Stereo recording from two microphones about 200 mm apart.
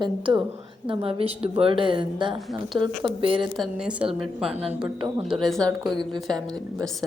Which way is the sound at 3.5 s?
Centre (ahead or behind).